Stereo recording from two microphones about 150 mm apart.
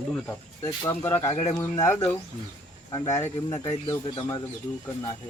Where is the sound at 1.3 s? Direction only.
45° left (ahead or behind).